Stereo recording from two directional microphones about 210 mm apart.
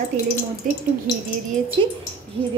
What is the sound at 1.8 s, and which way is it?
Speech, 25° right (ahead or behind).